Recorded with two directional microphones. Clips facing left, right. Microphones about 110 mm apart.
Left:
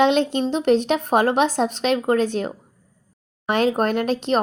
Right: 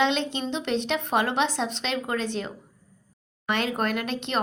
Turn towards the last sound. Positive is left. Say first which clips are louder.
# left 7 dB
turn(degrees=40)  # may be behind; listen again after turning